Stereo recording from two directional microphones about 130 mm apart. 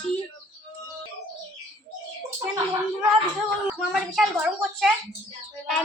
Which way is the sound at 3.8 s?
Centre (ahead or behind).